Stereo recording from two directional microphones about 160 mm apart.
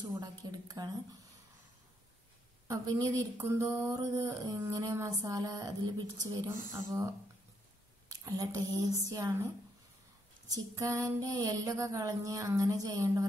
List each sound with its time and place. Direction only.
0.2 s speech: 25° right (ahead or behind)
2.7 s a sound: 20° right (ahead or behind)
3.9 s speech: 20° right (ahead or behind)
8.1 s speech: 25° right (ahead or behind)
10.5 s speech: 20° right (ahead or behind)